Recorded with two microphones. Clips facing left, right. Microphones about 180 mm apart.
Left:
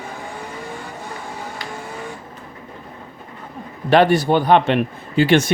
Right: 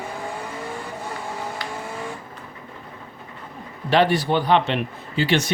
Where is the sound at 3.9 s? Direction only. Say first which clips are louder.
Left 5 dB; 50° left (ahead or behind).